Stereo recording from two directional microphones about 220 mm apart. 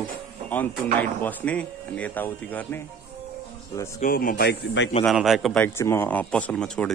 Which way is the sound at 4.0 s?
40° left (ahead or behind).